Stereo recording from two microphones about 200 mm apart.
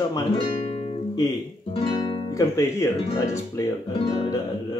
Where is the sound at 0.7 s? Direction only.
25° left (ahead or behind).